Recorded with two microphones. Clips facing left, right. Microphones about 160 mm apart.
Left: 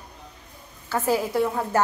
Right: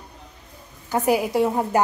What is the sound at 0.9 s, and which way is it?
Speech, 15° right (ahead or behind).